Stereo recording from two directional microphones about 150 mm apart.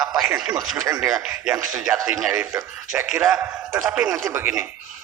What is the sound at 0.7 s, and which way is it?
Speech, 20° right (ahead or behind).